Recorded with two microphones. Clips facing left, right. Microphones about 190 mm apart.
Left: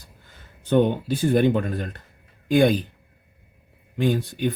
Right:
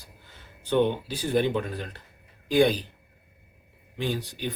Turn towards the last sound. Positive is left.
turn(degrees=50)  # may be behind; listen again after turning